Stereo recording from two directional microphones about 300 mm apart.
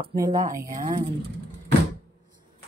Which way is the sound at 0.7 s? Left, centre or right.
Right.